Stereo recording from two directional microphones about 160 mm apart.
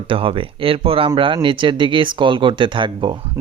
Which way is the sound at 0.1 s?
35° right (ahead or behind).